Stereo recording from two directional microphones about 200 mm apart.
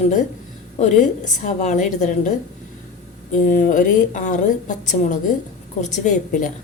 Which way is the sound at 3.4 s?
40° left (ahead or behind).